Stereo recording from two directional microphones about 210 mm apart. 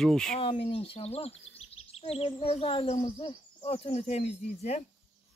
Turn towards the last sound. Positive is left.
turn(degrees=30)  # may be behind; listen again after turning